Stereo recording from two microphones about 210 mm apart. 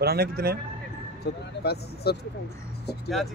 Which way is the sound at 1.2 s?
50° left (ahead or behind).